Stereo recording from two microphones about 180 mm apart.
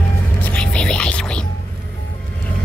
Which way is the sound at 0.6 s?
5° left (ahead or behind).